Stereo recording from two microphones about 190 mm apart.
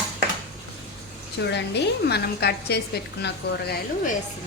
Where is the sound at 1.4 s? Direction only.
65° left (ahead or behind).